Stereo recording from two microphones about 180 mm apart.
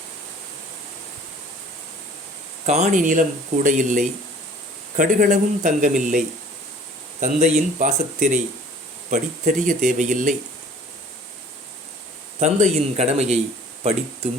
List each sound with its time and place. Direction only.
2.6 s speech: 40° right (ahead or behind)
12.4 s speech: 40° right (ahead or behind)